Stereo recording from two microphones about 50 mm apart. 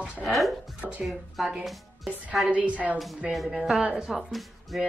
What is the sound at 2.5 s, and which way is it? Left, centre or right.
Speech, right.